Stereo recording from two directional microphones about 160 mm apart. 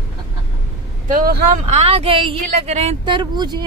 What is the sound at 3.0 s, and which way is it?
Speech, 30° right (ahead or behind).